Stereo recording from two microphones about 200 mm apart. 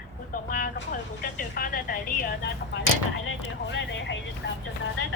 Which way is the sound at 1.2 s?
45° left (ahead or behind).